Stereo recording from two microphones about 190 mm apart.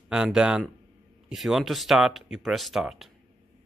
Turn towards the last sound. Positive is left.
turn(degrees=0)  # may be behind; listen again after turning